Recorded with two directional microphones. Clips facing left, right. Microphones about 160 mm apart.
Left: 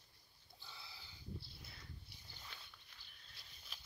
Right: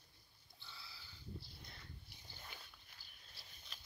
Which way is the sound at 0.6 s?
15° left (ahead or behind).